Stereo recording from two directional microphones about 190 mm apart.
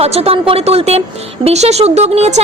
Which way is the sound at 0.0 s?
30° right (ahead or behind).